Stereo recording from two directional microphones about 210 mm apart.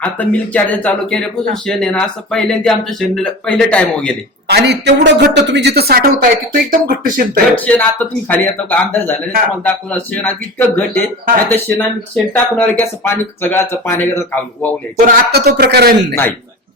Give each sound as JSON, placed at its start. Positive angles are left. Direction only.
{"t": 0.0, "sound": "speech", "side_deg": 5}
{"t": 4.4, "sound": "a woman's voice", "side_deg": -50}
{"t": 7.5, "sound": "speech", "side_deg": 5}
{"t": 15.0, "sound": "a woman's voice", "side_deg": -50}